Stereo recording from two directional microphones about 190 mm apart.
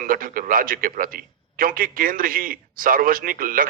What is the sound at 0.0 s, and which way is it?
A man's voice, 50° right (ahead or behind).